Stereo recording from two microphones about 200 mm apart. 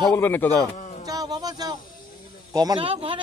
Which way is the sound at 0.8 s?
35° left (ahead or behind).